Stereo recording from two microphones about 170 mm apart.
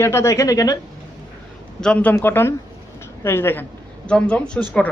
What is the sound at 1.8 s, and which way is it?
A man's voice, 5° left (ahead or behind).